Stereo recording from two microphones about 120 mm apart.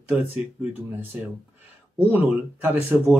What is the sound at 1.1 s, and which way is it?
Speech, 15° right (ahead or behind).